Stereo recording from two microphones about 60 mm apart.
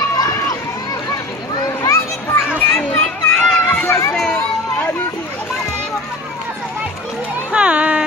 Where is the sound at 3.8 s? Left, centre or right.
Left.